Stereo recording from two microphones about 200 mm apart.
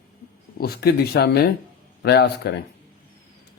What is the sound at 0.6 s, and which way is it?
A man's voice, 50° left (ahead or behind).